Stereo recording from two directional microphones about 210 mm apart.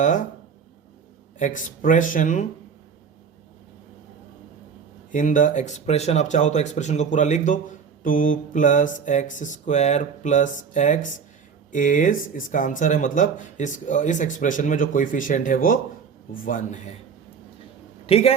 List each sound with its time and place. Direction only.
0.0 s speech: 35° left (ahead or behind)
1.4 s speech: 40° left (ahead or behind)
5.1 s speech: 35° left (ahead or behind)
18.0 s a man's voice: 30° left (ahead or behind)